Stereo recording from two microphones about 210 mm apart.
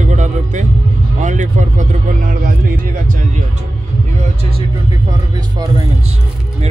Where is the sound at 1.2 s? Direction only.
35° right (ahead or behind).